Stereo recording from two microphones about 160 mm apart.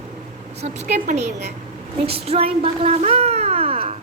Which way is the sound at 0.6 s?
45° right (ahead or behind).